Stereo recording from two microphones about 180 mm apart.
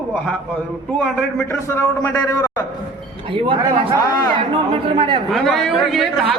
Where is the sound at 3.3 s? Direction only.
30° right (ahead or behind).